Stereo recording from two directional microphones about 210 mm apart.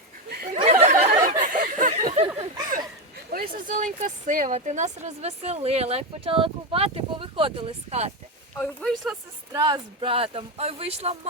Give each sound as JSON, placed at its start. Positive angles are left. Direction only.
{"t": 0.5, "sound": "a sound", "side_deg": -30}
{"t": 3.5, "sound": "a woman's voice", "side_deg": -40}
{"t": 8.5, "sound": "speech", "side_deg": 5}
{"t": 9.5, "sound": "a woman's voice", "side_deg": -20}